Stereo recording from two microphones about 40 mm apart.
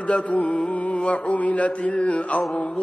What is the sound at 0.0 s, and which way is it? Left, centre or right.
Mantra, left.